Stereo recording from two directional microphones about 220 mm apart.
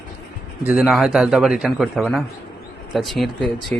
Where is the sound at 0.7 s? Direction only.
5° right (ahead or behind).